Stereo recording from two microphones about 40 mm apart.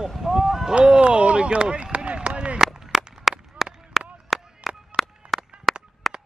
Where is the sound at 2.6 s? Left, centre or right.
Centre.